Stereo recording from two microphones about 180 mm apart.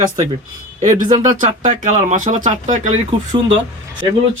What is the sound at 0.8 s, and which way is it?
Speech, 40° right (ahead or behind).